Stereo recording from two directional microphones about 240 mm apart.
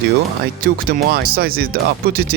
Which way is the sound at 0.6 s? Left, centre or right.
Right.